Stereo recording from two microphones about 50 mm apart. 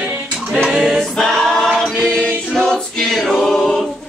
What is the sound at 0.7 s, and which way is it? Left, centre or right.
Choir, centre.